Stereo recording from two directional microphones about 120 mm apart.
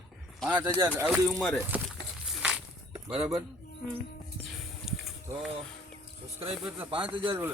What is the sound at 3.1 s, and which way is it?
Speech, 55° right (ahead or behind).